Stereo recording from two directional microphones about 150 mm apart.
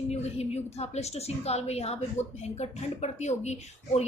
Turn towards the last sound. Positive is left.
turn(degrees=50)  # may be behind; listen again after turning